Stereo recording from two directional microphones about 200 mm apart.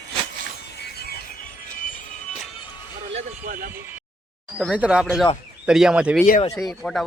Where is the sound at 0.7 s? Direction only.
55° left (ahead or behind); by 2.4 s 40° left (ahead or behind).